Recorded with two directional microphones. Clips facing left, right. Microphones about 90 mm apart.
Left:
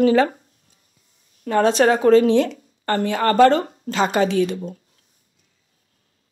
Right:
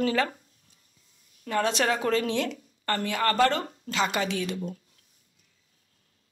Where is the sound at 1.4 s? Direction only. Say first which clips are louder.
Left 10 dB; 35° left (ahead or behind).